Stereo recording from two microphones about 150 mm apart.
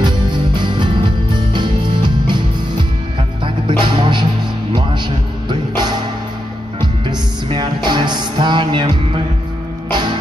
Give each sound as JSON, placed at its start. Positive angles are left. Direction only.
{"t": 0.0, "sound": "music", "side_deg": -30}
{"t": 3.4, "sound": "music", "side_deg": -35}